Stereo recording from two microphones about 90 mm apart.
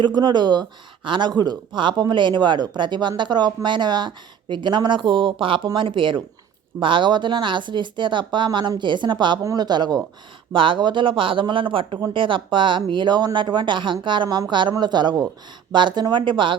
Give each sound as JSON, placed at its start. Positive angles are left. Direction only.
{"t": 0.0, "sound": "speech", "side_deg": -50}
{"t": 9.4, "sound": "speech", "side_deg": -35}
{"t": 9.6, "sound": "speech", "side_deg": -50}
{"t": 10.5, "sound": "speech", "side_deg": -70}